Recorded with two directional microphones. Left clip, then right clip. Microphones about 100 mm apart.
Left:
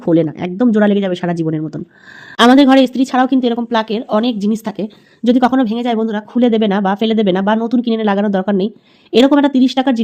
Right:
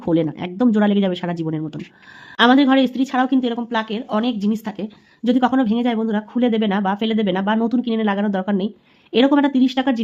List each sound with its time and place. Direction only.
0.0 s speech: 25° left (ahead or behind)
2.4 s a woman's voice: 60° left (ahead or behind); by 10.0 s 40° left (ahead or behind)